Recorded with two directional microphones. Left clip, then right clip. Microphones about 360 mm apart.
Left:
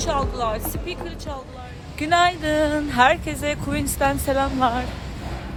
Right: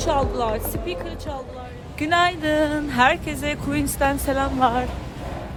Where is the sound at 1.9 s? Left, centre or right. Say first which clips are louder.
Left 1 dB; centre.